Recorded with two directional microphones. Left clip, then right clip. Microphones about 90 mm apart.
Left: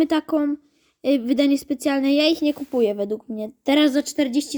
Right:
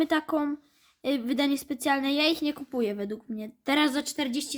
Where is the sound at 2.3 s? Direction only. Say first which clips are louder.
Left 7 dB; 15° left (ahead or behind).